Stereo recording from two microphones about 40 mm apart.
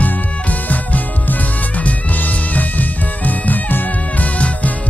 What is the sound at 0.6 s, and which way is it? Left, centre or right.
Music, left.